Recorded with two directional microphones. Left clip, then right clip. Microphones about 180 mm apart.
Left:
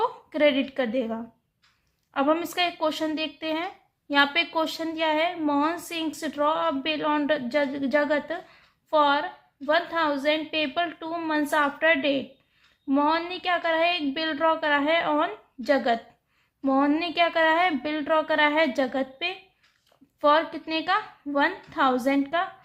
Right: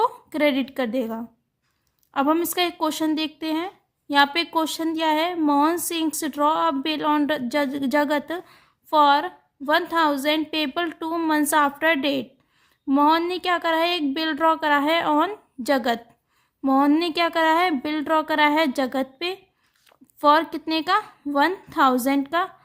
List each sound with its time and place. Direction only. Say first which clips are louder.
0.0 s a woman's voice: right 1 dB; 35° right (ahead or behind)